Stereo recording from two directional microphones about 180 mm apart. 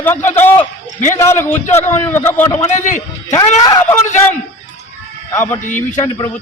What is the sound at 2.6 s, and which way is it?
Speech, 45° left (ahead or behind).